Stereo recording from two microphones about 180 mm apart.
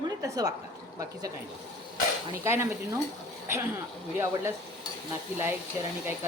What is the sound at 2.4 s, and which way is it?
Speech, 15° right (ahead or behind).